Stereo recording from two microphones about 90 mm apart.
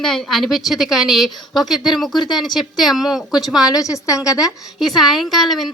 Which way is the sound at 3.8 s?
35° left (ahead or behind).